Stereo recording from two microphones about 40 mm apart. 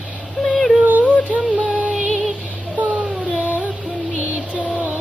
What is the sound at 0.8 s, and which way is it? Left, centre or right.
Music, right.